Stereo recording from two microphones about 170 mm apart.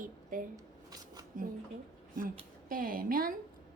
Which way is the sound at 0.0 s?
55° right (ahead or behind).